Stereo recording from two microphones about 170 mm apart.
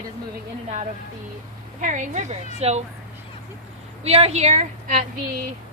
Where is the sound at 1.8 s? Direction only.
45° right (ahead or behind).